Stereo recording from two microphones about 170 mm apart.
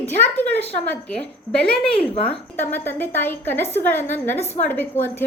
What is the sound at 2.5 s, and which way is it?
A woman's voice, 10° left (ahead or behind).